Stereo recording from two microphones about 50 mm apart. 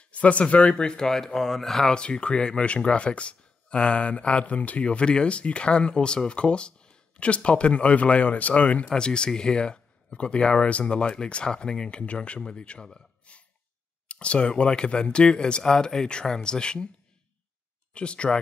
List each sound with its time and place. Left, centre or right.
0.0 s speech: left
17.9 s speech: left